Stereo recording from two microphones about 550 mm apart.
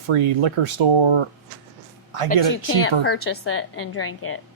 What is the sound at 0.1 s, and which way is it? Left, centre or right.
Speech, right.